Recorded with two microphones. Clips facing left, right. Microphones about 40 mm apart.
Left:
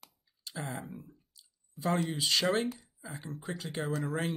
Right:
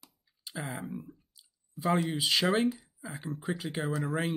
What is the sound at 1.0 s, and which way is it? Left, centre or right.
Clicking, centre.